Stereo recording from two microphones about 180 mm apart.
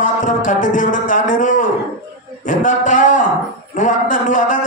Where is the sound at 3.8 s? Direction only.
45° left (ahead or behind).